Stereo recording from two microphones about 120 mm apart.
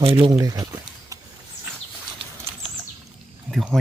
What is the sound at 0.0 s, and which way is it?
Speech, 50° right (ahead or behind).